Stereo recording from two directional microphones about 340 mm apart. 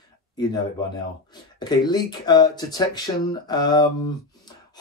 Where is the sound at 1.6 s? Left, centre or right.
Centre.